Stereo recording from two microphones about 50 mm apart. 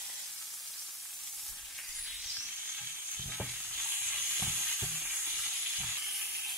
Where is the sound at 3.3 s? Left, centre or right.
Centre.